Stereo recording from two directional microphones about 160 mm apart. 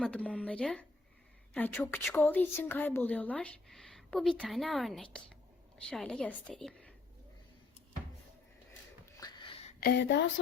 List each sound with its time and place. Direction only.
0.0 s a woman's voice: 5° left (ahead or behind)
9.2 s a sound: 35° left (ahead or behind)
9.8 s speech: 90° left